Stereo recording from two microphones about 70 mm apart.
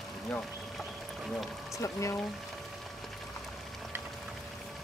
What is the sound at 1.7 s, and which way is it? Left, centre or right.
Speech, left.